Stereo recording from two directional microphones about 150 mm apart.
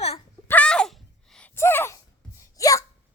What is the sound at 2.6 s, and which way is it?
Hiccup, 20° left (ahead or behind).